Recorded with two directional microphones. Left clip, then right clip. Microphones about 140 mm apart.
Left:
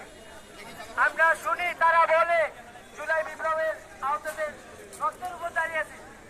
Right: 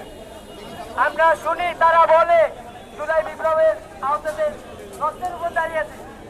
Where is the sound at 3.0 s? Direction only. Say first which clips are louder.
Right 7 dB; 20° left (ahead or behind).